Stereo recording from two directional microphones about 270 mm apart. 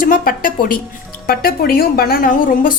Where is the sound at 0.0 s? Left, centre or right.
Left.